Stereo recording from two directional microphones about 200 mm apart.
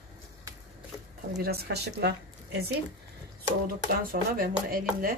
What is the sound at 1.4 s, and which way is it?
Speech, 50° right (ahead or behind).